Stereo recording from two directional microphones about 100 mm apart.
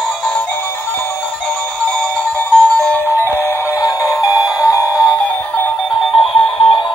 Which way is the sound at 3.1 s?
20° left (ahead or behind).